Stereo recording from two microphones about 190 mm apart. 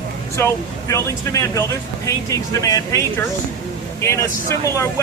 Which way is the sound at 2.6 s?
15° left (ahead or behind).